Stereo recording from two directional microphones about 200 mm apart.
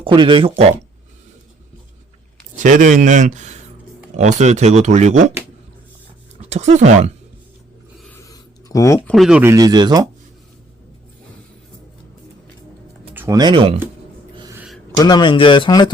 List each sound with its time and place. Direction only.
0.0 s speech: 25° right (ahead or behind)
2.6 s speech: 40° right (ahead or behind)
6.5 s speech: 35° right (ahead or behind)
7.9 s writing: 5° left (ahead or behind)
8.2 s a sound: 15° left (ahead or behind)
9.0 s speech: centre (ahead or behind)
9.4 s speech: 15° right (ahead or behind)
13.1 s speech: 15° right (ahead or behind)
14.3 s a sound: 20° right (ahead or behind)
14.9 s speech: 20° left (ahead or behind)